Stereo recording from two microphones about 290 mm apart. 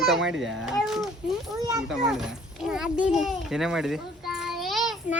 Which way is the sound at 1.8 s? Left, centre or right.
Centre.